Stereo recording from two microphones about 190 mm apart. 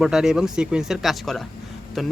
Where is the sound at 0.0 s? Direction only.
5° right (ahead or behind).